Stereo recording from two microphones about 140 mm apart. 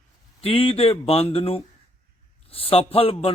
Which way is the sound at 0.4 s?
40° left (ahead or behind).